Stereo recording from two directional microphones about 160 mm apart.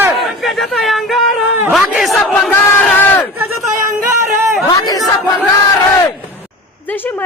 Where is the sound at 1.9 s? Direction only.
Centre (ahead or behind).